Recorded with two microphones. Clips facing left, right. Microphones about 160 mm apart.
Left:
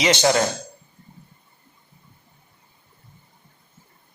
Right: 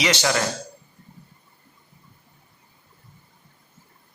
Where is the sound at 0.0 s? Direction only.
25° left (ahead or behind).